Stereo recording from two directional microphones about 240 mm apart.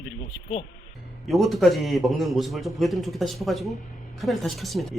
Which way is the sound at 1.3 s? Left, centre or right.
Centre.